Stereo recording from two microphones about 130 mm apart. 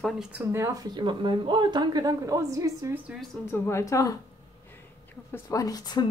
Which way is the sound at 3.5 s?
20° left (ahead or behind).